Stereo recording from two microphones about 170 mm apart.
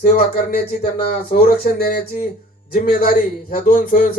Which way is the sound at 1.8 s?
60° left (ahead or behind).